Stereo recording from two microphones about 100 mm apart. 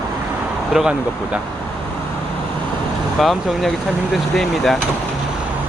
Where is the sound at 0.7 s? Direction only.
5° right (ahead or behind).